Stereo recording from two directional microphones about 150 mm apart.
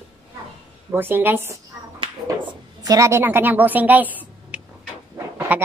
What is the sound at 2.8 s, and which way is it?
A woman's voice, 20° right (ahead or behind).